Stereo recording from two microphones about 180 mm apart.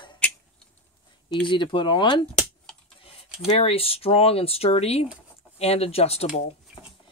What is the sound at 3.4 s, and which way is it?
Speech, 35° left (ahead or behind).